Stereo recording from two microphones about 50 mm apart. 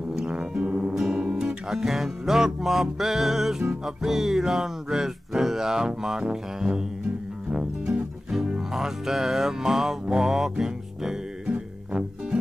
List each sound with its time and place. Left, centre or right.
0.1 s music: centre
1.0 s music: centre; by 8.0 s right
8.3 s music: centre